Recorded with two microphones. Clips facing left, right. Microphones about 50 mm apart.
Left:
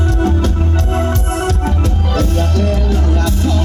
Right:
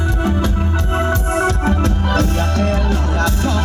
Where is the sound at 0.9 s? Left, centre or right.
Right.